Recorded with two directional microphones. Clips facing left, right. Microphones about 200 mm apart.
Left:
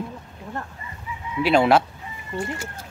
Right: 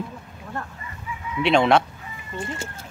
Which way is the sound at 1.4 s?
5° left (ahead or behind).